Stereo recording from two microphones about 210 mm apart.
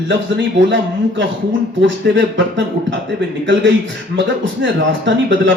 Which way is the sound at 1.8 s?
60° right (ahead or behind).